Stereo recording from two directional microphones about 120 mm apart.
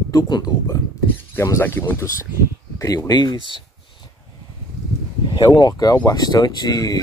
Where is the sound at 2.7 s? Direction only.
30° left (ahead or behind).